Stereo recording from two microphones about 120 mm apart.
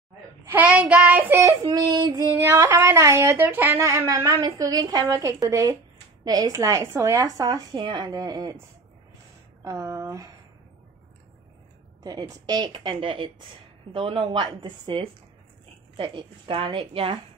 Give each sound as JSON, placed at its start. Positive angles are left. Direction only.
{"t": 0.5, "sound": "child singing", "side_deg": -10}
{"t": 1.7, "sound": "a woman's voice", "side_deg": -35}
{"t": 2.3, "sound": "a woman's voice", "side_deg": -20}
{"t": 9.6, "sound": "speech", "side_deg": -25}
{"t": 12.0, "sound": "a woman's voice", "side_deg": -30}